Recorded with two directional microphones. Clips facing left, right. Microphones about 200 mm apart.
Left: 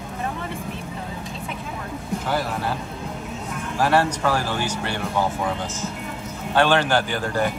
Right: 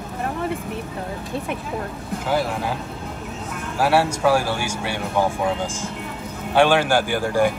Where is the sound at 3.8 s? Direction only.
10° right (ahead or behind).